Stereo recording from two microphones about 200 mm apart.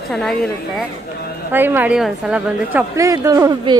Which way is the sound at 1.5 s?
10° right (ahead or behind).